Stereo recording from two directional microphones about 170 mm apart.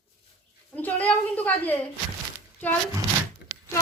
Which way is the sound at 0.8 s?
10° left (ahead or behind).